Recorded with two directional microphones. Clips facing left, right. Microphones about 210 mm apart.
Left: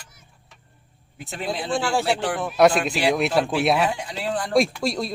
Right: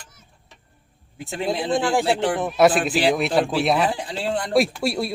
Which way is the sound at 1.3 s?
25° right (ahead or behind).